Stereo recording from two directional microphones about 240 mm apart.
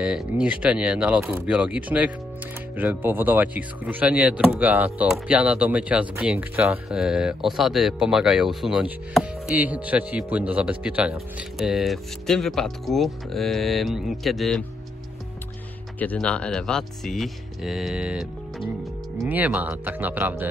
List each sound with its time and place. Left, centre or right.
0.0 s speech: centre
16.0 s speech: centre